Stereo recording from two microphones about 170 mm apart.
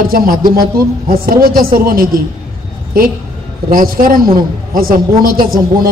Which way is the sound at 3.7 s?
55° right (ahead or behind).